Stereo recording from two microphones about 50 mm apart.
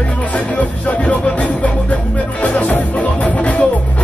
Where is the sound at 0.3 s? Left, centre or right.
Left.